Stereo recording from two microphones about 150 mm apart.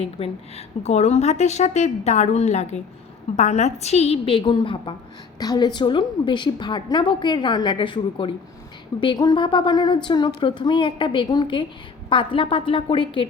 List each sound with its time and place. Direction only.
0.0 s a woman's voice: 40° left (ahead or behind)